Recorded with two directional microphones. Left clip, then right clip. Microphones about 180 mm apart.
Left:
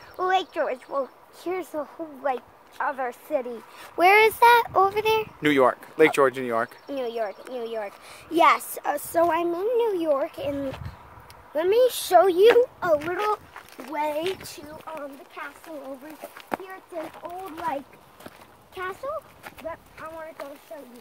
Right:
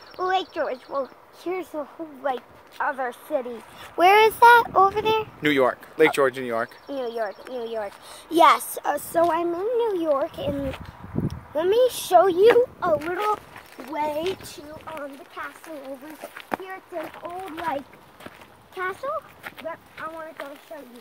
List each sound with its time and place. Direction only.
0.2 s a sound: centre (ahead or behind)
0.9 s speech: centre (ahead or behind)
4.9 s speech: 15° left (ahead or behind)
6.9 s speech: 15° left (ahead or behind)
7.5 s speech: 5° right (ahead or behind)
8.4 s speech: 15° right (ahead or behind)
9.1 s speech: 20° left (ahead or behind)
11.2 s a sound: 10° left (ahead or behind)
13.0 s speech: centre (ahead or behind)